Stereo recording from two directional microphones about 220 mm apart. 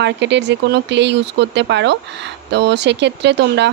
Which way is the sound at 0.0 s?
50° right (ahead or behind).